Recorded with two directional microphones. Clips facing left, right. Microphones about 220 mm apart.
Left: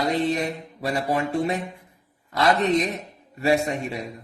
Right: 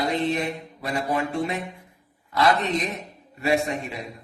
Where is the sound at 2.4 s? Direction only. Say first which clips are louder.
Left 2 dB; 40° left (ahead or behind).